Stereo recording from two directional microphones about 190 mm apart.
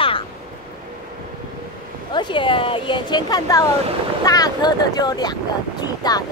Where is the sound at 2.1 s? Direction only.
25° left (ahead or behind).